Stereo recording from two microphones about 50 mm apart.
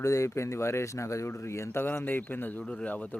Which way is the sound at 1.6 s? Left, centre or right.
Left.